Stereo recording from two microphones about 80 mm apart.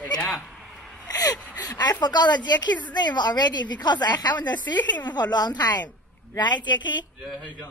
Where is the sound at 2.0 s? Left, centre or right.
Left.